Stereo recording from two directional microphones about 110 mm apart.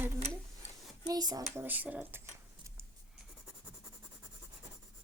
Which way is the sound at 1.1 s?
35° right (ahead or behind).